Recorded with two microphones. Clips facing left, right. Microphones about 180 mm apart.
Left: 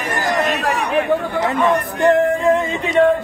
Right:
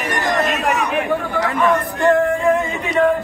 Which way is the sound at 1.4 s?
20° left (ahead or behind).